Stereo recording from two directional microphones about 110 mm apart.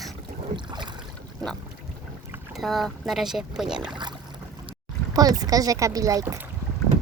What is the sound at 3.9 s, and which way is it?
A child's voice, 40° right (ahead or behind).